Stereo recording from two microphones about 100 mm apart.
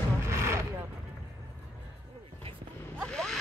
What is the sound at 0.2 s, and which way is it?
Vehicle, 25° right (ahead or behind).